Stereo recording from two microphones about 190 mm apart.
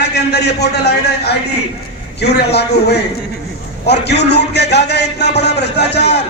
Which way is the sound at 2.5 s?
60° left (ahead or behind).